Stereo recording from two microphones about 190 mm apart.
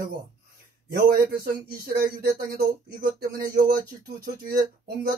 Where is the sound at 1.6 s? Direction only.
55° right (ahead or behind).